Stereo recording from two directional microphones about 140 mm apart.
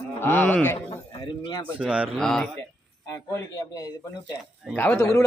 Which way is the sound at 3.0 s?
20° left (ahead or behind).